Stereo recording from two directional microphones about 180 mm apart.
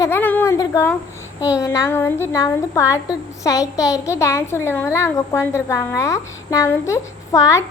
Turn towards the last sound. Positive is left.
turn(degrees=15)  # may be behind; listen again after turning